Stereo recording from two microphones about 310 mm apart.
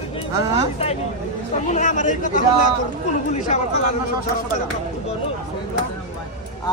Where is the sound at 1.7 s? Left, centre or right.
Left.